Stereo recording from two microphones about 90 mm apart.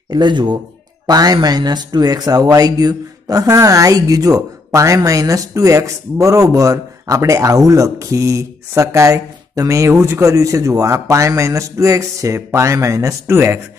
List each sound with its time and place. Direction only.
0.1 s speech: 55° right (ahead or behind)
1.0 s speech: 45° right (ahead or behind); by 13.7 s 25° right (ahead or behind)